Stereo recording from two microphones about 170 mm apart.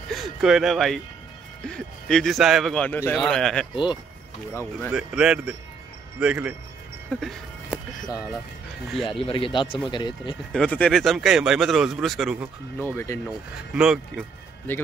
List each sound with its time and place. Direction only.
0.1 s speech: centre (ahead or behind)
3.7 s speech: 25° left (ahead or behind)
4.9 s speech: 5° right (ahead or behind)
7.1 s music: centre (ahead or behind)
8.9 s speech: centre (ahead or behind)
9.2 s speech: 30° left (ahead or behind)
10.5 s speech: 5° left (ahead or behind)
12.9 s speech: 15° left (ahead or behind)
13.7 s speech: 5° right (ahead or behind)
14.7 s speech: 10° left (ahead or behind)